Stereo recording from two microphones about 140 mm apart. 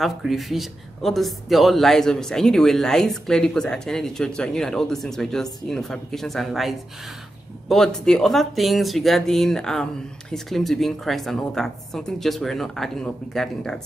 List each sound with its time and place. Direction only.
0.0 s speech: centre (ahead or behind)